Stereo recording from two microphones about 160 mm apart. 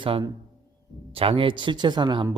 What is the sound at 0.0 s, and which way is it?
Speech, 30° right (ahead or behind).